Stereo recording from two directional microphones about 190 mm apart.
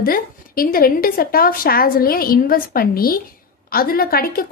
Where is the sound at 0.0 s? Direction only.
50° left (ahead or behind).